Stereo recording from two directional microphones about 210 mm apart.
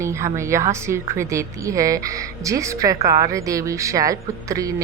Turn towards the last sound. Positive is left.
turn(degrees=-15)  # may be behind; listen again after turning